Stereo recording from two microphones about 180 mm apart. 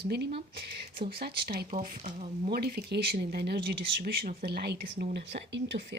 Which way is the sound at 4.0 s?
55° right (ahead or behind).